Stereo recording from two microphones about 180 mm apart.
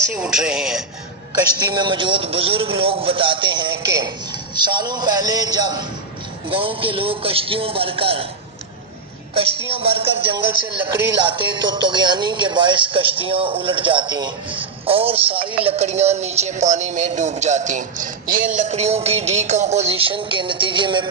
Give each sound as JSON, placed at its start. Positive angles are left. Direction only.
{"t": 0.1, "sound": "speech", "side_deg": -5}
{"t": 1.5, "sound": "speech", "side_deg": -25}
{"t": 9.6, "sound": "speech", "side_deg": -30}